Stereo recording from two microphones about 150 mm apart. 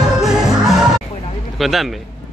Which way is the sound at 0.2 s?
Centre (ahead or behind).